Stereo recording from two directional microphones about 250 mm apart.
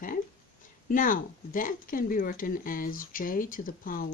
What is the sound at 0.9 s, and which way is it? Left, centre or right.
Speech, left.